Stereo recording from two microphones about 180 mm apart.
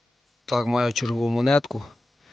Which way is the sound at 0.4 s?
Centre (ahead or behind).